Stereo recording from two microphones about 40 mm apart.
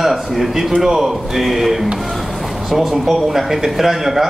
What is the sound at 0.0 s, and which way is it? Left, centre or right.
Speech, centre.